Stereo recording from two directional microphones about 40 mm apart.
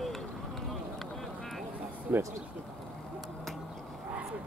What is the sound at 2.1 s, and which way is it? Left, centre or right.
Speech, right.